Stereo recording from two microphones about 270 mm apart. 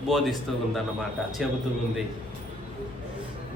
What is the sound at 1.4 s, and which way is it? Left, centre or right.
Speech, centre.